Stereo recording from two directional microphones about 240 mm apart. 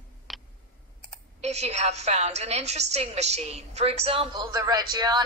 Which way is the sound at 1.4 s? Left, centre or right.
Right.